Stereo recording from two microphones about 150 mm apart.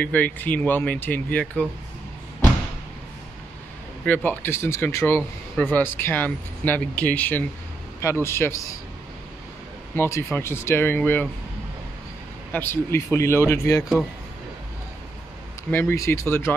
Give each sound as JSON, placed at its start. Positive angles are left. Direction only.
{"t": 0.0, "sound": "speech", "side_deg": 10}
{"t": 4.0, "sound": "speech", "side_deg": 10}
{"t": 9.9, "sound": "speech", "side_deg": 15}
{"t": 12.5, "sound": "speech", "side_deg": 15}
{"t": 15.7, "sound": "speech", "side_deg": 15}